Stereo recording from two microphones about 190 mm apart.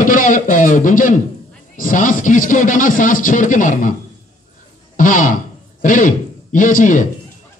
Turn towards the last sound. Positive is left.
turn(degrees=45)  # may be behind; listen again after turning